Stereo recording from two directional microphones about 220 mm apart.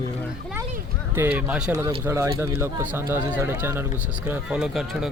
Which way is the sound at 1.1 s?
10° right (ahead or behind).